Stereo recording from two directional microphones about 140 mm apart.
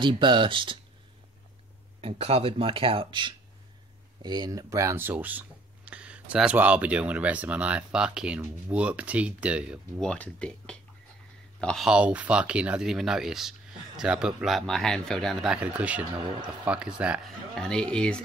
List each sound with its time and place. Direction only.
0.0 s speech: 35° right (ahead or behind)
2.0 s speech: 45° right (ahead or behind); by 9.8 s 10° right (ahead or behind)
9.9 s speech: 5° left (ahead or behind)
17.6 s speech: 5° left (ahead or behind)